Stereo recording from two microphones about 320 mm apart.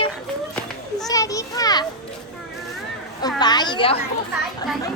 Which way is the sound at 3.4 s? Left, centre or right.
Centre.